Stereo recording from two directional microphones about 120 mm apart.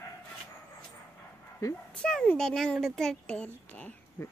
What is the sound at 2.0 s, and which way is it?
Speech, 5° left (ahead or behind).